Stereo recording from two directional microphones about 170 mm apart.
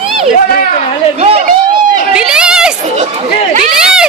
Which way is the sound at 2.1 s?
5° right (ahead or behind).